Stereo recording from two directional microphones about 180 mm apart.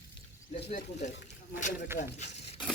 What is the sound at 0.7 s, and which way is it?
Speech, 40° left (ahead or behind).